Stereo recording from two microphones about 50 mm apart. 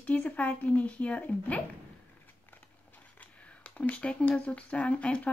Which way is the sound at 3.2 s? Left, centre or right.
Left.